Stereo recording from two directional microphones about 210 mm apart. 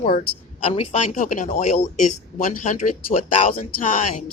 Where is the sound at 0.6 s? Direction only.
30° left (ahead or behind).